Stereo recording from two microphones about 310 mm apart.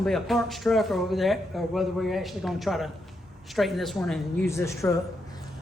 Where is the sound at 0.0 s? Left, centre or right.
Centre.